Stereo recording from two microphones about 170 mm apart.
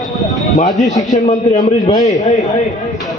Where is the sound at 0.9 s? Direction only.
20° left (ahead or behind).